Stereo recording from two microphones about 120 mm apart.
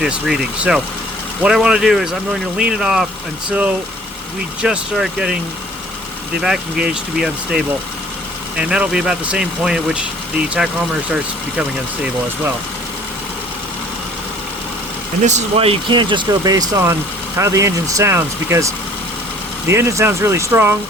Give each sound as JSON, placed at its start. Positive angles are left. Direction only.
{"t": 0.0, "sound": "speech", "side_deg": -5}
{"t": 4.6, "sound": "speech", "side_deg": -5}
{"t": 6.4, "sound": "speech", "side_deg": -5}
{"t": 15.2, "sound": "speech", "side_deg": -75}
{"t": 15.5, "sound": "speech", "side_deg": -55}